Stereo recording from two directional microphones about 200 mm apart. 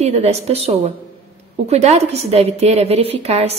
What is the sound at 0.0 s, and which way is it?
A woman's voice, 30° right (ahead or behind).